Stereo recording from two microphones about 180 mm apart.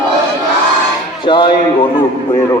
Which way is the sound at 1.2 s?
25° left (ahead or behind).